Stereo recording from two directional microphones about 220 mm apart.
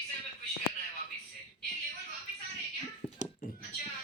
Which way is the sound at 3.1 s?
40° left (ahead or behind).